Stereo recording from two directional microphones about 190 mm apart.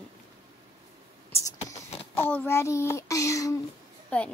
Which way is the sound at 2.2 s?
10° left (ahead or behind).